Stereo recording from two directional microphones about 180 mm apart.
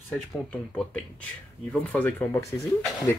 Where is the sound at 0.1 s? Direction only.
5° left (ahead or behind).